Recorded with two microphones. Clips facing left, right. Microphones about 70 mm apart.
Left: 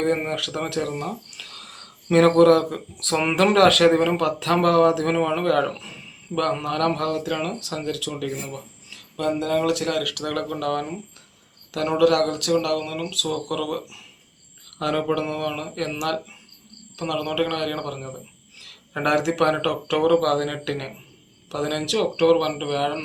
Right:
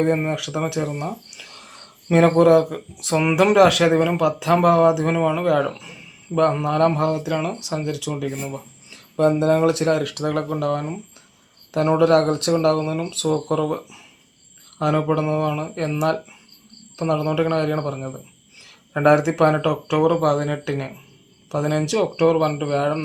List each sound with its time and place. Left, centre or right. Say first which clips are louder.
0.0 s speech: right 3 dB; centre